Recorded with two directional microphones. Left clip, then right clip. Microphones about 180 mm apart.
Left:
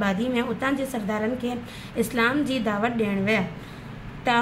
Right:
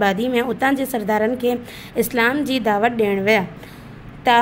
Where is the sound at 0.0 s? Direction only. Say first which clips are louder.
Right 7 dB; 50° right (ahead or behind).